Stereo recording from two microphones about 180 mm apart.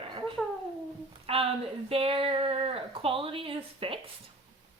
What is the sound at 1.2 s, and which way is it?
A woman's voice, 30° right (ahead or behind).